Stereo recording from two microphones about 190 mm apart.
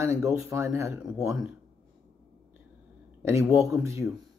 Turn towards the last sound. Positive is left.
turn(degrees=-15)  # may be behind; listen again after turning